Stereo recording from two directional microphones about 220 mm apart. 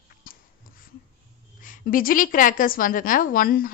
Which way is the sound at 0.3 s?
40° left (ahead or behind).